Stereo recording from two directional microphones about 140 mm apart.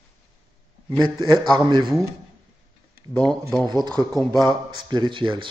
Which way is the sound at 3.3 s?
5° left (ahead or behind).